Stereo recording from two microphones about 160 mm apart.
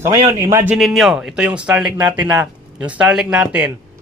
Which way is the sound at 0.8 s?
Centre (ahead or behind).